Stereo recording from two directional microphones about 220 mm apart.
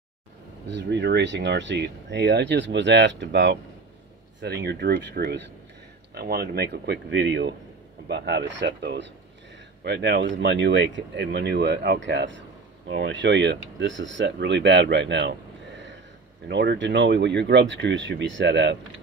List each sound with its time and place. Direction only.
0.7 s speech: 50° right (ahead or behind)
16.4 s speech: 50° right (ahead or behind)